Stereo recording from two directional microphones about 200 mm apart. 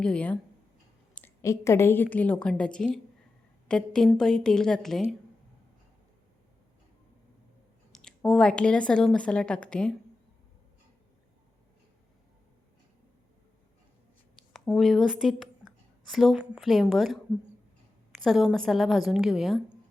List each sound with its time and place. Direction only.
0.0 s a woman's voice: 5° left (ahead or behind)
7.9 s speech: centre (ahead or behind)
14.5 s speech: centre (ahead or behind)